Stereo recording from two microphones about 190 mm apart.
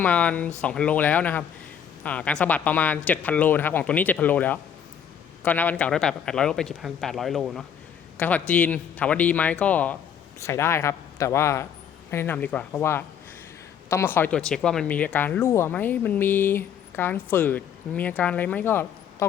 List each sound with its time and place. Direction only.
0.0 s a man's voice: 5° left (ahead or behind)